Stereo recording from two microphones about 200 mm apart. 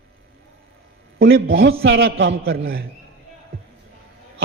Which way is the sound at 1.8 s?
60° right (ahead or behind).